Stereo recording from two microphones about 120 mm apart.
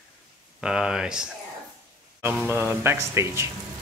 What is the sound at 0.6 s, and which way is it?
Speech, 5° right (ahead or behind).